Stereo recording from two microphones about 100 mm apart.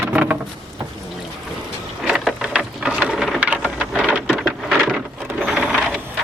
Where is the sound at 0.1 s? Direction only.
15° right (ahead or behind).